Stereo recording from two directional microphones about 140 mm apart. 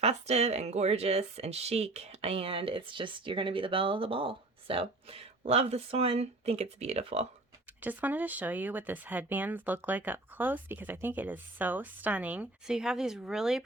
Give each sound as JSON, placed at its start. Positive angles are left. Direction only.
{"t": 0.0, "sound": "speech", "side_deg": -50}
{"t": 7.8, "sound": "speech", "side_deg": -10}